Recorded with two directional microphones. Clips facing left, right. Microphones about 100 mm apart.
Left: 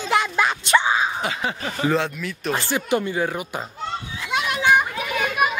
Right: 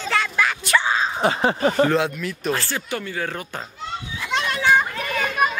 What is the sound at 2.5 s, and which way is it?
Speech, 20° left (ahead or behind).